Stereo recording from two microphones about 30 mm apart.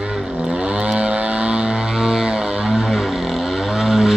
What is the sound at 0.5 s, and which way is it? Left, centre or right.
Vehicle, right.